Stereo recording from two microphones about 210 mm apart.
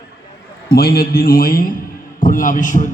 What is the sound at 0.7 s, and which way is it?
A man's voice, 45° left (ahead or behind).